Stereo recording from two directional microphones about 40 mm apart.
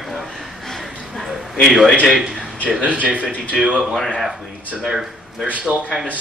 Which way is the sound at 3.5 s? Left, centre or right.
Centre.